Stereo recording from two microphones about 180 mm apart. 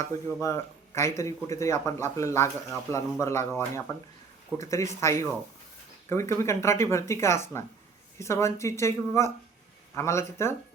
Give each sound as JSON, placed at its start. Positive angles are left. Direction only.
{"t": 0.0, "sound": "speech", "side_deg": 15}